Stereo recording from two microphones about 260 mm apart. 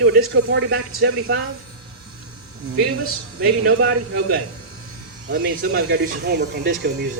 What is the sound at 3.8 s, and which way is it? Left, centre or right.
A man's voice, right.